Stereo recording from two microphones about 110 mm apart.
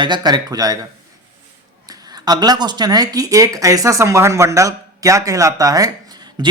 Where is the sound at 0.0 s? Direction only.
40° right (ahead or behind).